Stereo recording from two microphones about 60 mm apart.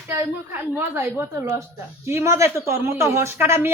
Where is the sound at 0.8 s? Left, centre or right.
Right.